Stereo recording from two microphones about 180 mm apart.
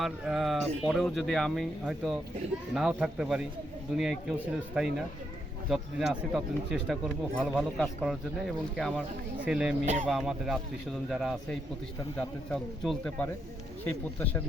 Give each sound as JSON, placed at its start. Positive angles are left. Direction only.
{"t": 0.0, "sound": "speech", "side_deg": 0}
{"t": 9.8, "sound": "speech", "side_deg": -40}
{"t": 10.1, "sound": "speech", "side_deg": 0}
{"t": 12.5, "sound": "speech", "side_deg": 0}